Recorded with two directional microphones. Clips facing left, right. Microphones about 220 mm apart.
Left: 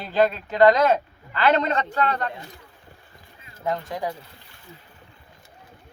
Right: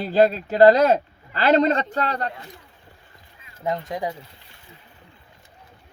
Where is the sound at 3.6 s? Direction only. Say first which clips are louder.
Right 1 dB; 20° right (ahead or behind).